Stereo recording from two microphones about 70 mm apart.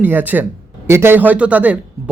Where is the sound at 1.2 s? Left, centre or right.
Right.